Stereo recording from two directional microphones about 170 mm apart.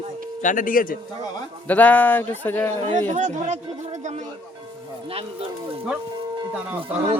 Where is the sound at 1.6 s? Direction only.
10° left (ahead or behind).